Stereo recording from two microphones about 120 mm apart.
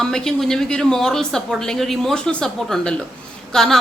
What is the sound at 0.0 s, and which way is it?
A woman's voice, 5° left (ahead or behind).